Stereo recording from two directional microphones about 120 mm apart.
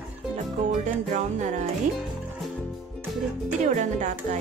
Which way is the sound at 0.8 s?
80° right.